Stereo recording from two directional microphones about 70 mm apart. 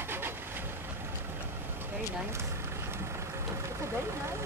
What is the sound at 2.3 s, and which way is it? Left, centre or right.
Vehicle, right.